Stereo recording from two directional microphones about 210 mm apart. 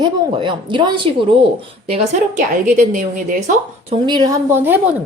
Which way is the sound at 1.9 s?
35° right (ahead or behind).